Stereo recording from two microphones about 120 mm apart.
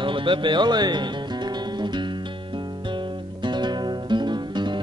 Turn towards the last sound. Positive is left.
turn(degrees=-40)  # may be behind; listen again after turning